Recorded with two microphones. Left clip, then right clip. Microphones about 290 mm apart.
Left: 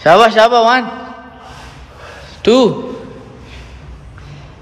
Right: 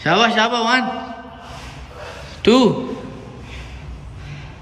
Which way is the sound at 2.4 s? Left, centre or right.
Centre.